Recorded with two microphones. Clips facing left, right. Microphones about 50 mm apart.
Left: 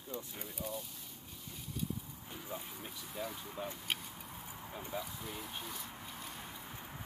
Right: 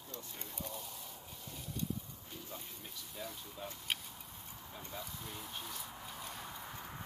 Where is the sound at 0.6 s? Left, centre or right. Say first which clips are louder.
Left 4 dB; centre.